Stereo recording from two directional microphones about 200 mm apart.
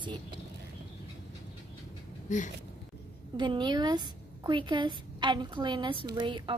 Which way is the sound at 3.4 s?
25° right (ahead or behind).